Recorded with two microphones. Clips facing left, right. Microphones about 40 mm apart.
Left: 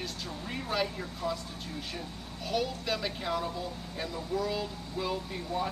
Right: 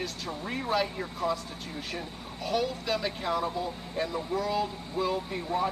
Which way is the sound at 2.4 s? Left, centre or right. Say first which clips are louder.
Right 2 dB; centre.